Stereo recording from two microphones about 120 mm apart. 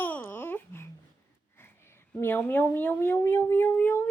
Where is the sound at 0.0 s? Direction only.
15° left (ahead or behind).